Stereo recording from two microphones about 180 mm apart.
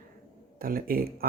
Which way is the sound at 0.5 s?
55° right (ahead or behind).